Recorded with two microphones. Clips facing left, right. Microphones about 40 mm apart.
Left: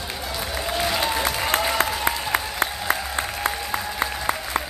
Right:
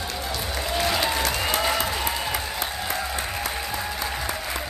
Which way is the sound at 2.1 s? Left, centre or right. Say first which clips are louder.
Left 3 dB; left.